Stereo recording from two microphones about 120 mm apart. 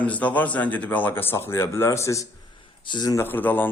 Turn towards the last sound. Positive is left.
turn(degrees=15)  # may be behind; listen again after turning